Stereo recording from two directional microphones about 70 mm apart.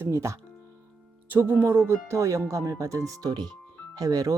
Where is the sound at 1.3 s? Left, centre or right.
Right.